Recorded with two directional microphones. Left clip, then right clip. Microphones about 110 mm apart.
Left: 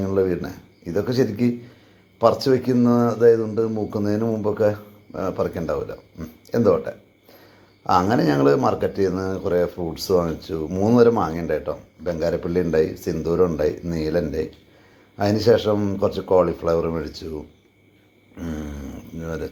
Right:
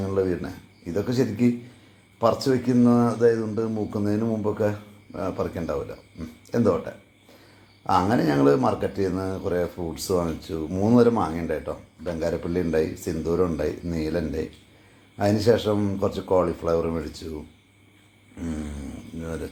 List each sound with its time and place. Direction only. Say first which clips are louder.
0.0 s speech: left 4 dB; 20° left (ahead or behind)
18.3 s a sound: left 2 dB; 5° left (ahead or behind)
19.2 s speech: left 4 dB; 15° left (ahead or behind)